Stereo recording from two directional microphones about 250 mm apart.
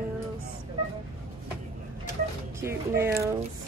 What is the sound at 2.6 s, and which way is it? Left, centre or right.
Speech, centre.